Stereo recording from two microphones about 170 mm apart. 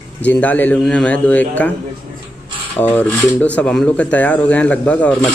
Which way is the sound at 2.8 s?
10° left (ahead or behind).